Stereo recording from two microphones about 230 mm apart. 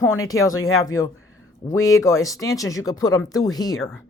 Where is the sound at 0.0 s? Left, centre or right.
Centre.